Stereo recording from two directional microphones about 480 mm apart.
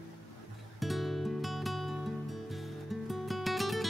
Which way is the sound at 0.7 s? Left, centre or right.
Centre.